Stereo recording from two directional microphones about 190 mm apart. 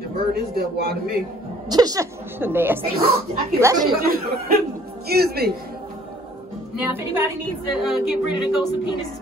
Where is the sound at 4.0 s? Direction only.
50° right (ahead or behind).